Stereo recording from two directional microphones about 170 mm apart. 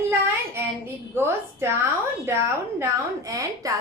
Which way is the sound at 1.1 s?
15° right (ahead or behind).